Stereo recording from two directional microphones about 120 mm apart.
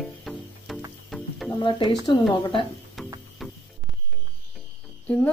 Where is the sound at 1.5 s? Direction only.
40° left (ahead or behind).